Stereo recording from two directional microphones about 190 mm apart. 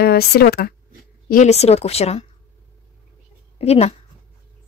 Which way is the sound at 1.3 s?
40° left (ahead or behind).